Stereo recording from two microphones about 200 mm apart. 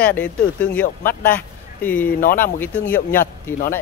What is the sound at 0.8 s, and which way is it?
Speech, 45° left (ahead or behind).